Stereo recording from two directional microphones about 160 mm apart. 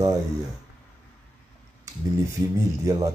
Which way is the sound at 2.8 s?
20° right (ahead or behind).